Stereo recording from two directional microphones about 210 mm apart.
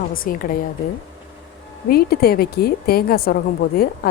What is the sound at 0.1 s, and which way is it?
Speech, 40° left (ahead or behind).